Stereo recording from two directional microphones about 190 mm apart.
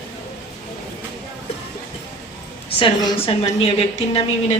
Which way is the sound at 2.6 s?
25° left (ahead or behind).